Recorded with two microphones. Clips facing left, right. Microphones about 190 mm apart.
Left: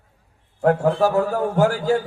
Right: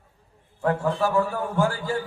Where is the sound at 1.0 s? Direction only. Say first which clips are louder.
Left 3 dB; 40° left (ahead or behind).